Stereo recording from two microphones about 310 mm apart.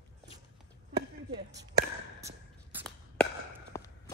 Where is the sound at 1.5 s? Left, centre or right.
Right.